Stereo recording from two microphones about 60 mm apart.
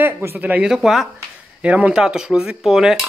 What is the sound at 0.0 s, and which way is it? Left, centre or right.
Speech, right.